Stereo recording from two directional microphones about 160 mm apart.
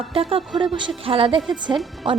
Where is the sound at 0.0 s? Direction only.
35° right (ahead or behind).